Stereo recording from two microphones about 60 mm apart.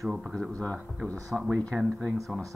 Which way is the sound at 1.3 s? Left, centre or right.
Right.